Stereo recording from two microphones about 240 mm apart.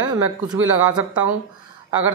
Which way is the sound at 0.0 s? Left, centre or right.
Centre.